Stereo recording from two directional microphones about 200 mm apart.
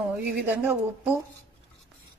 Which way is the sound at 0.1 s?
10° right (ahead or behind).